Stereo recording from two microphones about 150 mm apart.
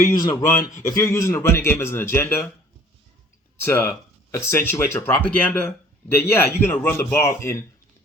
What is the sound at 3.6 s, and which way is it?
Speech, 15° left (ahead or behind).